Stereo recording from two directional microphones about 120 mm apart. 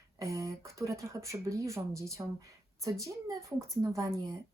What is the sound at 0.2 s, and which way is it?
Speech, 25° right (ahead or behind).